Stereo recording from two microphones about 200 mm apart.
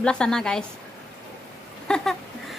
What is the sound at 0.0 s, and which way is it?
Speech, 5° left (ahead or behind).